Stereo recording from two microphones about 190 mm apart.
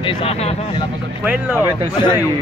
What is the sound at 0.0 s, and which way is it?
Speech, 30° left (ahead or behind).